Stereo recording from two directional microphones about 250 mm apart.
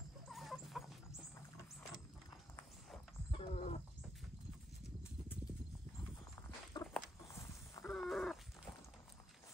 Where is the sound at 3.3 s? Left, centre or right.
Left.